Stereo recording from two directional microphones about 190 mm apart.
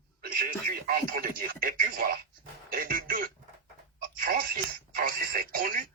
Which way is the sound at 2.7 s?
45° right (ahead or behind).